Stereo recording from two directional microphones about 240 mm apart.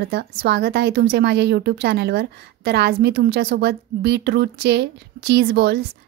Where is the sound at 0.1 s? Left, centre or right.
Right.